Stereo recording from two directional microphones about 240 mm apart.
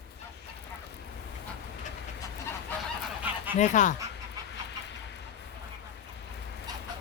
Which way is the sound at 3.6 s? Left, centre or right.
Left.